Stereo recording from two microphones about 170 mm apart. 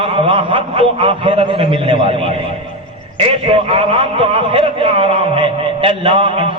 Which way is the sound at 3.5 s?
35° right (ahead or behind).